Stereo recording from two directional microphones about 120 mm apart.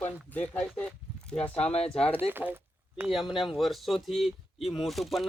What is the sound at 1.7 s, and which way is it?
Speech, 60° left (ahead or behind).